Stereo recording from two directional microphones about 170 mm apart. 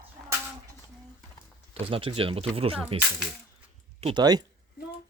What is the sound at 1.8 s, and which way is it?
Speech, 30° right (ahead or behind).